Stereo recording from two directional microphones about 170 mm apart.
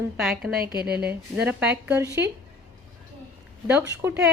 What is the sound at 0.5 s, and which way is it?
Speech, 65° right (ahead or behind).